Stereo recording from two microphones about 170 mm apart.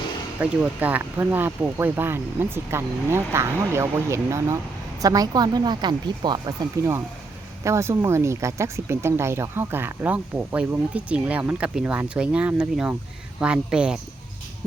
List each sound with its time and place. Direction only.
0.3 s speech: 10° right (ahead or behind)